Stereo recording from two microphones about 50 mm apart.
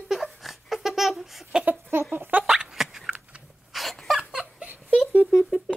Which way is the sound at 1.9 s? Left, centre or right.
Right.